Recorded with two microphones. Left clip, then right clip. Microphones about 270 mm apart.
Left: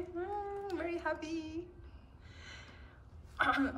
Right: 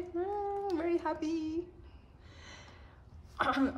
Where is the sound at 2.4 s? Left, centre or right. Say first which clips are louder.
Even; right.